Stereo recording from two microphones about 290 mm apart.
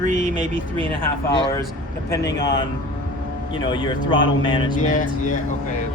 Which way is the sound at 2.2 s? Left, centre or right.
Left.